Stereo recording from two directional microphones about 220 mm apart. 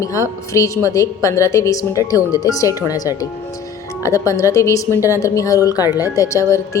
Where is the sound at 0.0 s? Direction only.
15° left (ahead or behind).